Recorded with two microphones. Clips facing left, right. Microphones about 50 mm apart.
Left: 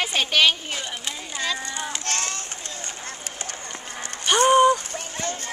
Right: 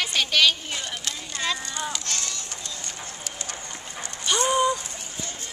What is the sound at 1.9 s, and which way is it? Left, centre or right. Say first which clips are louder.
Run: left 3 dB; left.